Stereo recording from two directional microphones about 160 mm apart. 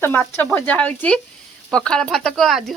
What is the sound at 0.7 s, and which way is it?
Speech, 5° left (ahead or behind).